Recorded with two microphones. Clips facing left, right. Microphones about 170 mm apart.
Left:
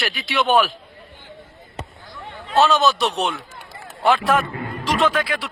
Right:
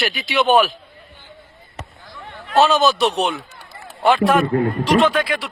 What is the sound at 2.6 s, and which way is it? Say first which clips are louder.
Speech: right 2 dB; centre (ahead or behind).